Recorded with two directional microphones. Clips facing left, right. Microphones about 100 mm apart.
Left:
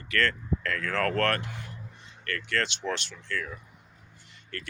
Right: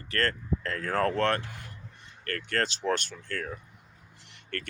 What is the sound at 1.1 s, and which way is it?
Speech, 20° right (ahead or behind).